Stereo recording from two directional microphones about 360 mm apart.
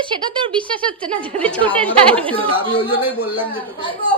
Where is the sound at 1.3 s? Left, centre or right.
Centre.